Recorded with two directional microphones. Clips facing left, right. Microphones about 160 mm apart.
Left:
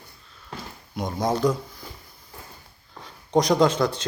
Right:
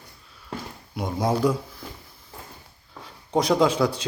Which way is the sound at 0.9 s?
5° right (ahead or behind).